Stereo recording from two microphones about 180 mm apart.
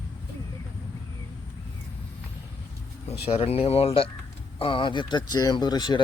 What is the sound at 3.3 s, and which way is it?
Speech, 35° left (ahead or behind).